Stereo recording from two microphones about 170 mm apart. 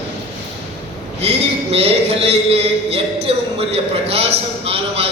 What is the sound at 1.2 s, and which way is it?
A man's voice, 35° right (ahead or behind).